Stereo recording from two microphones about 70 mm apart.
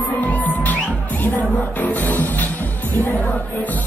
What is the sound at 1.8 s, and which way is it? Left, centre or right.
Music, left.